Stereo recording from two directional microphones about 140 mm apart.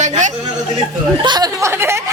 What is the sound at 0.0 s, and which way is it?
Chatter, 60° right (ahead or behind).